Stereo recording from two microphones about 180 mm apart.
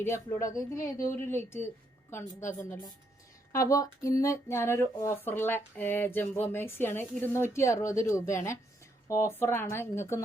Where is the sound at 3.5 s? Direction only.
15° left (ahead or behind).